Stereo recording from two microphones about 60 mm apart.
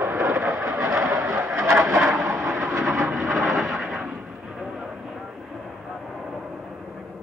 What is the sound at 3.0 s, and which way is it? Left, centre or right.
Vehicle, centre.